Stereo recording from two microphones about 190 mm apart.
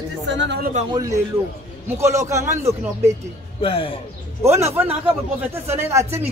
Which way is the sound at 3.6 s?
30° left (ahead or behind).